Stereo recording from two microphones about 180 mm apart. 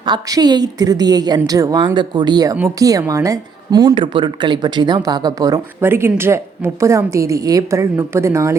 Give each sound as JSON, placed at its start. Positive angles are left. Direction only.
{"t": 0.0, "sound": "a woman's voice", "side_deg": -25}